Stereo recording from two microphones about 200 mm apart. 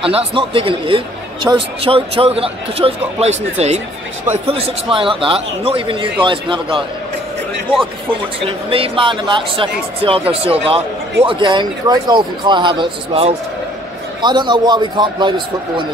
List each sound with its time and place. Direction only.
0.0 s a man's voice: 25° right (ahead or behind)
8.5 s a man's voice: 30° right (ahead or behind)